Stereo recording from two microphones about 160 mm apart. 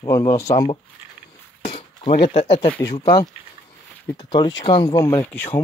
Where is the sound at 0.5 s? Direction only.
30° left (ahead or behind).